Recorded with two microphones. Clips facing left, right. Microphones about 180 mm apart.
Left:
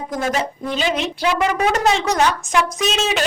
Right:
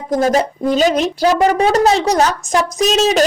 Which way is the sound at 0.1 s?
40° right (ahead or behind).